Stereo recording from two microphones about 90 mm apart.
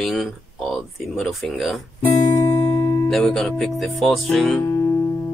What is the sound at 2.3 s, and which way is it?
Music, 20° left (ahead or behind).